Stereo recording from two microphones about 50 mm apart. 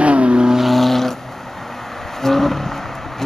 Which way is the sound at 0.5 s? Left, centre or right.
Centre.